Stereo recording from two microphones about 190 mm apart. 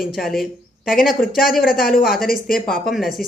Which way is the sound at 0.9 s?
50° left (ahead or behind).